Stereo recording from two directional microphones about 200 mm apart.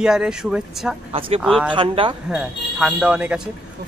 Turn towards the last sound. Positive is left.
turn(degrees=-5)  # may be behind; listen again after turning